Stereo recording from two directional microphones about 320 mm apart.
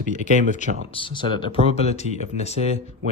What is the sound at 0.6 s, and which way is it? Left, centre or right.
Speech, left.